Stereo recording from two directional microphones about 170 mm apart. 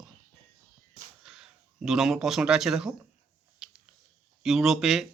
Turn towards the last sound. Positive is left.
turn(degrees=0)  # may be behind; listen again after turning